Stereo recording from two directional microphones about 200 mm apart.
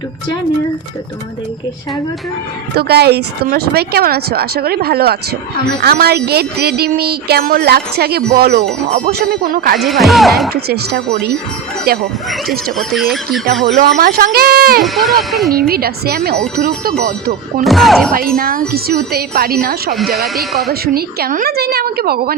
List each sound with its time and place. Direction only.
2.7 s speech: 55° right (ahead or behind)
9.7 s speech: centre (ahead or behind)
10.5 s speech: 50° right (ahead or behind)
12.7 s speech: centre (ahead or behind)
13.7 s speech: 40° right (ahead or behind)
14.8 s speech: centre (ahead or behind)
15.5 s speech: 50° right (ahead or behind)
17.6 s speech: centre (ahead or behind)
18.1 s speech: 45° right (ahead or behind)
20.2 s speech: centre (ahead or behind)
20.8 s speech: 50° right (ahead or behind)